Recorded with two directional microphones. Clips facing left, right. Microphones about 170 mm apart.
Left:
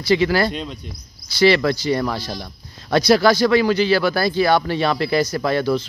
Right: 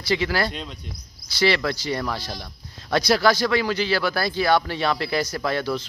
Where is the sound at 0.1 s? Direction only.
5° left (ahead or behind).